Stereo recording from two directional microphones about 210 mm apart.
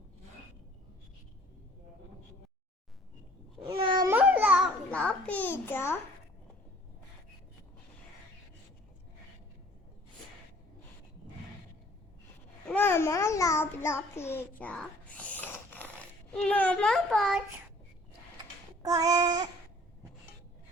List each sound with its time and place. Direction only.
3.6 s cat: 20° right (ahead or behind)
4.1 s babbling: 10° right (ahead or behind)
4.9 s a sound: 5° left (ahead or behind)
12.6 s babbling: 10° left (ahead or behind)
18.8 s child singing: 15° right (ahead or behind)